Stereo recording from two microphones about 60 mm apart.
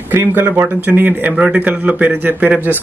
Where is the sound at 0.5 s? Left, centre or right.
Right.